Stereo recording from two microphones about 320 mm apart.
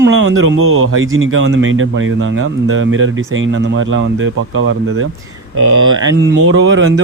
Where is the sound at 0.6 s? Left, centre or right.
Right.